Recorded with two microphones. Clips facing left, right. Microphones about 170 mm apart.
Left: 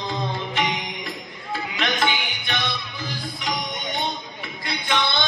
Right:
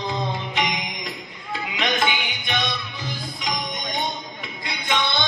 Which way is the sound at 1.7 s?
15° right (ahead or behind).